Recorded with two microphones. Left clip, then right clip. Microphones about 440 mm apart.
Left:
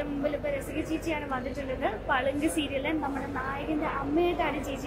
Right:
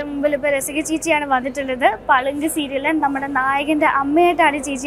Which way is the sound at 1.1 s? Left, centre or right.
Right.